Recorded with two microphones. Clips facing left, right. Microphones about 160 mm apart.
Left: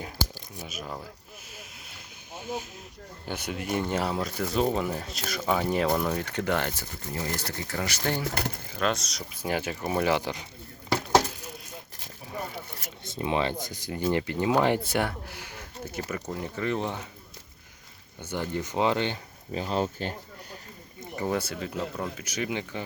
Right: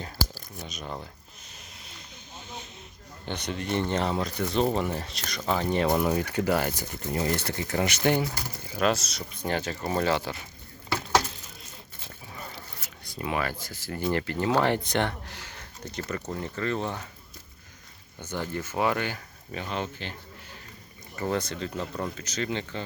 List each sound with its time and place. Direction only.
0.0 s speech: 10° left (ahead or behind)
2.3 s speech: 10° left (ahead or behind); by 8.2 s 20° right (ahead or behind)
8.8 s speech: 5° right (ahead or behind); by 10.4 s 15° left (ahead or behind)
13.1 s speech: 25° left (ahead or behind)
18.2 s speech: 15° left (ahead or behind); by 20.1 s 40° left (ahead or behind)
21.2 s speech: 10° left (ahead or behind)